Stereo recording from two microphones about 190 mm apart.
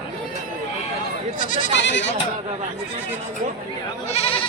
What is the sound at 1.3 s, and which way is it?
Speech, 45° left (ahead or behind).